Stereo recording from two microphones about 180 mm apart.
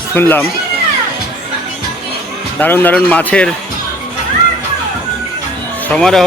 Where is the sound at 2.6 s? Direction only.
10° left (ahead or behind).